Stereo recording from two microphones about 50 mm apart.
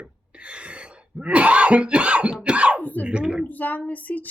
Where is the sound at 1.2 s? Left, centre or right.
Right.